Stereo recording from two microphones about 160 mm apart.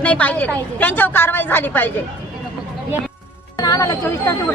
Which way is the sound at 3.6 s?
20° left (ahead or behind).